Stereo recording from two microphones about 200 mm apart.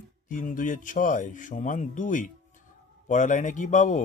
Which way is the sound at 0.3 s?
40° left (ahead or behind).